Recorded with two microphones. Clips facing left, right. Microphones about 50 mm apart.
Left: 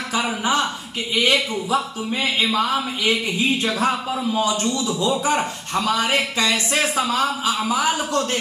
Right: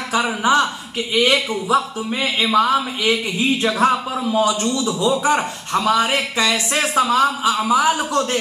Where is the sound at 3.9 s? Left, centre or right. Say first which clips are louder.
Right 3 dB; centre.